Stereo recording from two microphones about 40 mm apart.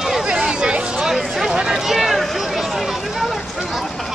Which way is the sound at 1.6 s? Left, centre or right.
Centre.